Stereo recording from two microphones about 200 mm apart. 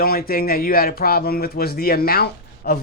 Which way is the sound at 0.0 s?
50° left (ahead or behind).